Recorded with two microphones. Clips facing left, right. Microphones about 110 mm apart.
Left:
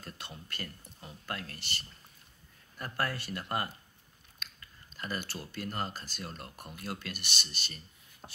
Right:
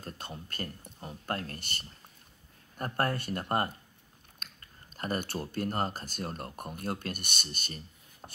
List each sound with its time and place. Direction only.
0.0 s speech: 40° right (ahead or behind)